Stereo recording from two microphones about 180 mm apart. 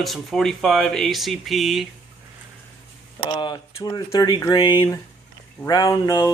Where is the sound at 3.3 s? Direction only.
25° left (ahead or behind).